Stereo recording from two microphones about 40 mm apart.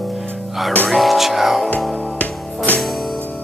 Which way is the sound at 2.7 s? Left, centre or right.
Left.